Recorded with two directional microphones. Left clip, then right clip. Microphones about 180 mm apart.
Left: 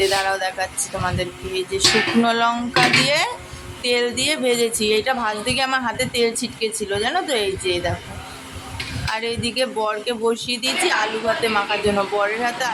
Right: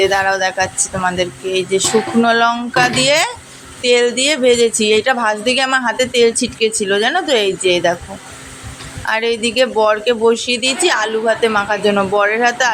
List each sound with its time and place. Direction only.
0.0 s speech: 20° right (ahead or behind)
9.0 s speech: 25° right (ahead or behind)